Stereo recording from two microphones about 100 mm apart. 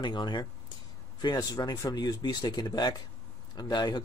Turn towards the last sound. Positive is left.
turn(degrees=45)  # may be behind; listen again after turning